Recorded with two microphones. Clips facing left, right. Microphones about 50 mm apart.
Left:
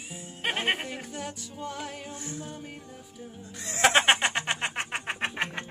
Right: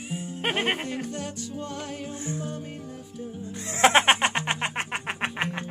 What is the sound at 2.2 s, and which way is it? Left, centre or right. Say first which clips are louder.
Music: right 8 dB; right.